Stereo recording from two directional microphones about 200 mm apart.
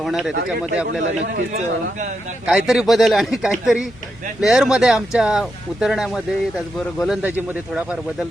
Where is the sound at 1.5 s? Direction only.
35° right (ahead or behind).